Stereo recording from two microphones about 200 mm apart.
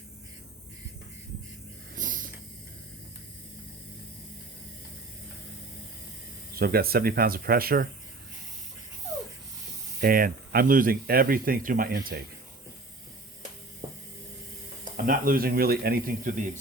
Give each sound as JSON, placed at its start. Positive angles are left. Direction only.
{"t": 2.0, "sound": "a sound", "side_deg": -40}
{"t": 6.5, "sound": "speech", "side_deg": -50}
{"t": 10.0, "sound": "speech", "side_deg": -45}
{"t": 14.9, "sound": "speech", "side_deg": -45}